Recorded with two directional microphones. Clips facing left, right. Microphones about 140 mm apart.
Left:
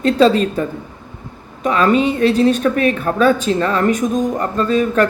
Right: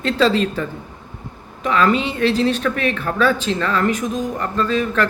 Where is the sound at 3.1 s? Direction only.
30° left (ahead or behind).